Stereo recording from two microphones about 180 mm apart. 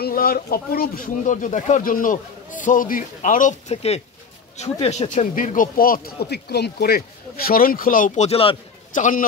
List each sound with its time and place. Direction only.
0.0 s speech: 55° left (ahead or behind)
8.3 s speech: 30° left (ahead or behind)
8.9 s speech: 45° left (ahead or behind)